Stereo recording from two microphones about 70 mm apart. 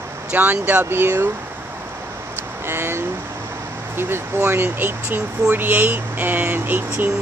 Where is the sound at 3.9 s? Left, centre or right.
Right.